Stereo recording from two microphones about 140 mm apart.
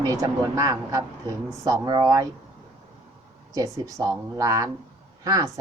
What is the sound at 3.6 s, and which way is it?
Speech, 25° right (ahead or behind).